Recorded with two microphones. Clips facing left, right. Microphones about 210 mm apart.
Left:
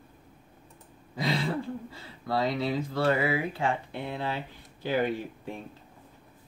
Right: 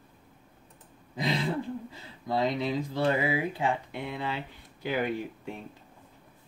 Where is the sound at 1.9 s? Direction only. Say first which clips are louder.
Even; 15° right (ahead or behind).